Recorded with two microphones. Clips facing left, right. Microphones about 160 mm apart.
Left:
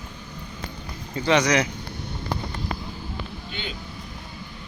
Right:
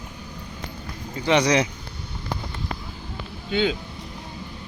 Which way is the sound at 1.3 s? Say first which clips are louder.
Right 2 dB; 30° right (ahead or behind).